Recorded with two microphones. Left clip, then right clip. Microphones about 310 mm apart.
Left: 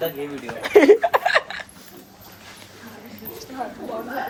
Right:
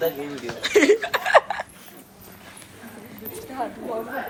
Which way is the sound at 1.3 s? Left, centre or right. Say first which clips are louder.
Right 4 dB; centre.